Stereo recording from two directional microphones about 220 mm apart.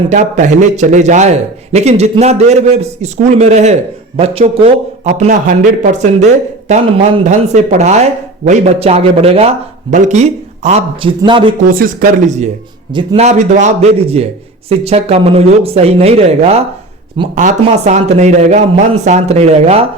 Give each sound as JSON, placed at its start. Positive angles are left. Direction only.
{"t": 0.1, "sound": "a man's voice", "side_deg": -35}
{"t": 11.6, "sound": "a man's voice", "side_deg": -40}